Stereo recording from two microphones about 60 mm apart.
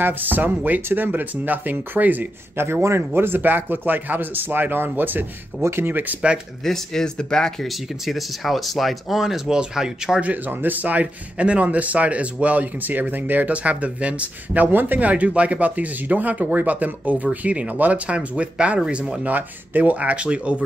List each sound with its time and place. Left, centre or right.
0.0 s speech: right
2.6 s speech: right
5.6 s speech: right
6.6 s speech: centre
7.6 s speech: centre
10.2 s a man's voice: right